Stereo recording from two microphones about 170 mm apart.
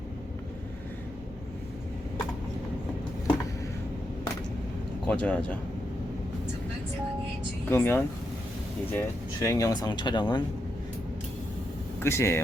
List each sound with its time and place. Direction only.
5.0 s speech: 5° left (ahead or behind)
7.7 s speech: 15° left (ahead or behind)
11.9 s speech: 15° left (ahead or behind)